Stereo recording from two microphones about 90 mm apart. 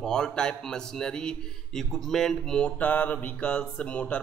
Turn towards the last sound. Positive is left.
turn(degrees=15)  # may be behind; listen again after turning